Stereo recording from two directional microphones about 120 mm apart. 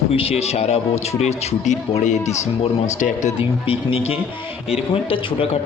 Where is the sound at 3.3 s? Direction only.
50° left (ahead or behind).